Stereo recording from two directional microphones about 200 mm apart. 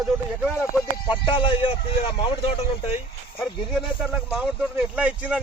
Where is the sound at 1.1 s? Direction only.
25° left (ahead or behind).